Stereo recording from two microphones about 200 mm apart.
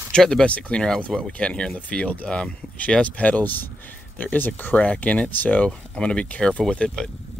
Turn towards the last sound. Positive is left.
turn(degrees=5)  # may be behind; listen again after turning